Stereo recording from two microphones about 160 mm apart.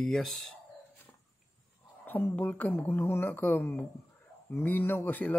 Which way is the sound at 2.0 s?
10° left (ahead or behind).